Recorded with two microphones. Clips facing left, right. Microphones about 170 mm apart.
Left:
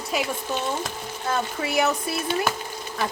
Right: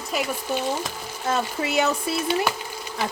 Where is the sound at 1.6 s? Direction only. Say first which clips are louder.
Even; 25° right (ahead or behind).